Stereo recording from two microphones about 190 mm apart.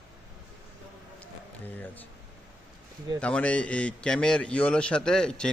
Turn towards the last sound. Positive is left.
turn(degrees=5)  # may be behind; listen again after turning